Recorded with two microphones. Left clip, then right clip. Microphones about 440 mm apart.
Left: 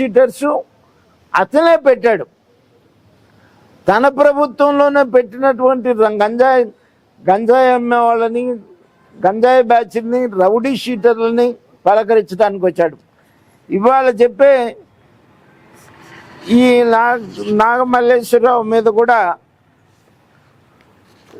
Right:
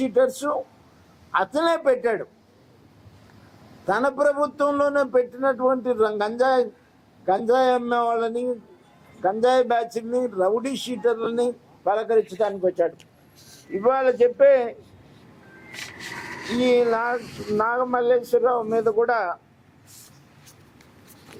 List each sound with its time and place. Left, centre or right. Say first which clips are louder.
0.0 s a man's voice: left 9 dB; left
3.8 s a man's voice: left 10 dB; left
16.6 s a man's voice: left 9 dB; left